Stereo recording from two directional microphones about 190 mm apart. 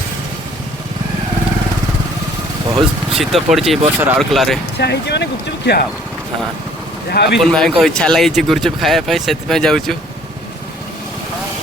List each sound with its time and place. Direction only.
3.1 s speech: centre (ahead or behind)
4.8 s speech: 60° left (ahead or behind)
7.1 s speech: 60° left (ahead or behind)
7.3 s speech: centre (ahead or behind)